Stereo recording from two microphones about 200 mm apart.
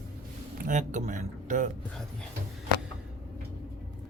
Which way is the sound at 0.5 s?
40° right (ahead or behind).